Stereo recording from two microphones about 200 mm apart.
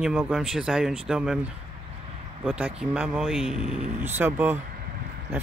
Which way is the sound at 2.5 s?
5° right (ahead or behind).